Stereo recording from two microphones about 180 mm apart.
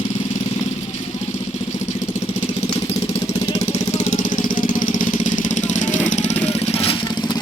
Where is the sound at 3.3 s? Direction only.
35° left (ahead or behind).